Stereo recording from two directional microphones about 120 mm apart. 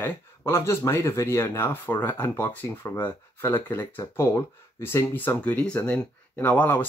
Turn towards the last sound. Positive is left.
turn(degrees=15)  # may be behind; listen again after turning